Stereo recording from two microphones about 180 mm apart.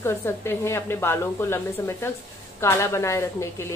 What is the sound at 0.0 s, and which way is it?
A woman's voice, 15° left (ahead or behind).